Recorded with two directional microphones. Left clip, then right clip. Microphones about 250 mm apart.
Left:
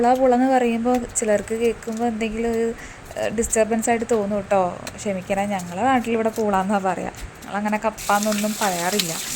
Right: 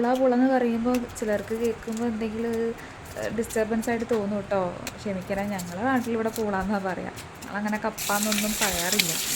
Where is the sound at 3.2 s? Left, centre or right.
Centre.